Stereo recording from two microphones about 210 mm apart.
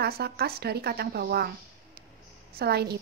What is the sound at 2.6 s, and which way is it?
Speech, 50° right (ahead or behind).